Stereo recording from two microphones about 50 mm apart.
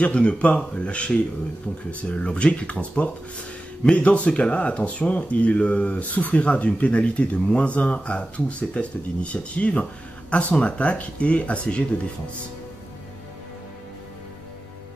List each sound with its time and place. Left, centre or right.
0.0 s speech: left